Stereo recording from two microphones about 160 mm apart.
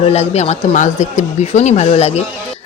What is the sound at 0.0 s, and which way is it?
Speech, 40° left (ahead or behind).